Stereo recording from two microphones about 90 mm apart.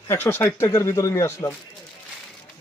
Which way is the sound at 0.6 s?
40° left (ahead or behind).